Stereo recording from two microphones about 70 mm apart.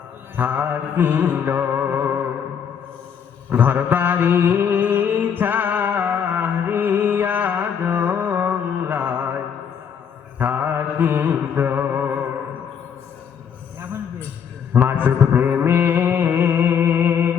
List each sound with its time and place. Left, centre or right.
0.3 s music: right
3.5 s mantra: right
10.3 s mantra: right
14.7 s a sound: right